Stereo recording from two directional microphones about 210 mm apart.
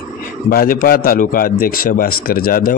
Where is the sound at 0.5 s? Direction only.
45° left (ahead or behind).